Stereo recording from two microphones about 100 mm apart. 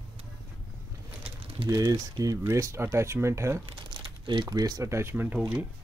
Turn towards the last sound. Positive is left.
turn(degrees=-20)  # may be behind; listen again after turning